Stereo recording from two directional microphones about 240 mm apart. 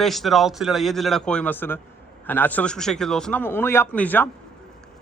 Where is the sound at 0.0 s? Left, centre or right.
Centre.